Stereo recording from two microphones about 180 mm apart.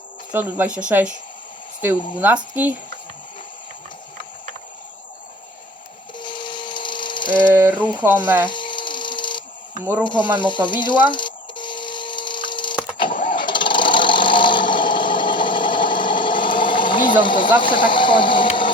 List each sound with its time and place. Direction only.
0.3 s speech: 10° right (ahead or behind)
6.1 s tools: 25° left (ahead or behind)
7.5 s speech: 10° right (ahead or behind)
8.4 s a sound: 25° left (ahead or behind)
10.0 s speech: 25° left (ahead or behind)
10.3 s a sound: 25° left (ahead or behind)
17.1 s speech: 25° left (ahead or behind)